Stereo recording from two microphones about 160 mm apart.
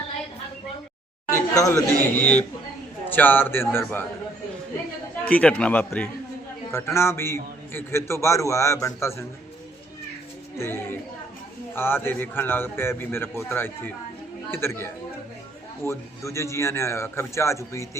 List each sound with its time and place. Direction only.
1.3 s a man's voice: 20° left (ahead or behind)
5.3 s a man's voice: 10° left (ahead or behind)
10.6 s a man's voice: 15° left (ahead or behind)